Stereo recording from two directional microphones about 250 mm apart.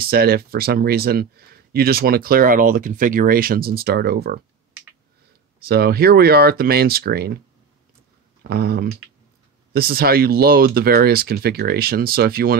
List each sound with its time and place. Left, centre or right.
0.0 s speech: right
5.7 s speech: right
8.5 s speech: right